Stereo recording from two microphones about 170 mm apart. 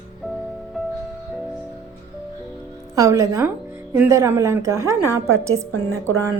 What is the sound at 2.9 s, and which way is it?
A woman's voice, 20° right (ahead or behind).